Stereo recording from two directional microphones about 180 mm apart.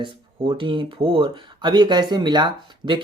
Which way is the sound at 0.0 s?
25° right (ahead or behind).